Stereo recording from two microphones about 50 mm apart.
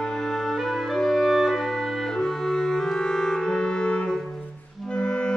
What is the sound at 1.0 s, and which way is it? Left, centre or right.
Clarinet, centre.